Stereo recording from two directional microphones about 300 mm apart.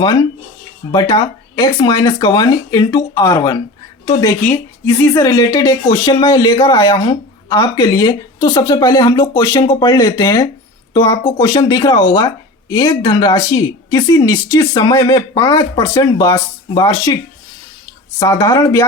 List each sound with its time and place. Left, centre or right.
0.9 s speech: centre
18.2 s speech: centre